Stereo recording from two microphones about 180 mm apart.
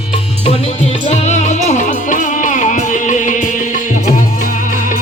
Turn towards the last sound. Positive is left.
turn(degrees=45)  # may be behind; listen again after turning